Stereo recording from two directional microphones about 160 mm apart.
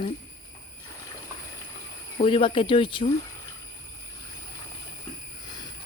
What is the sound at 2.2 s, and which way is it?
Speech, 35° left (ahead or behind).